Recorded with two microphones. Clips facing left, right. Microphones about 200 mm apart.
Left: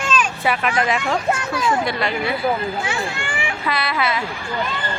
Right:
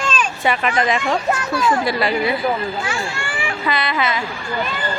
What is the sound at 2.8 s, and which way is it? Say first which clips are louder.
Speech: even; 20° left (ahead or behind).